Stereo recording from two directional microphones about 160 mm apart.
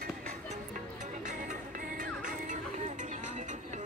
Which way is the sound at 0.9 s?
50° right (ahead or behind).